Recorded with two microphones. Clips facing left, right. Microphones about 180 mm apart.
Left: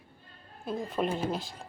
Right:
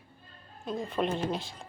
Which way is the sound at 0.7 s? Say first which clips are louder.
Even; centre (ahead or behind).